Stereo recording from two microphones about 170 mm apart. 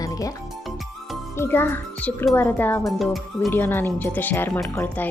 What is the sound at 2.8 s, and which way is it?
Speech, centre (ahead or behind).